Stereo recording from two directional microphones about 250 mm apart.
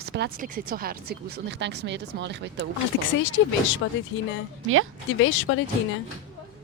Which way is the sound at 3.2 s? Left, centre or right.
Left.